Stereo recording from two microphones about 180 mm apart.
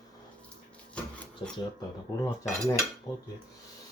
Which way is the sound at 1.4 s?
25° left (ahead or behind).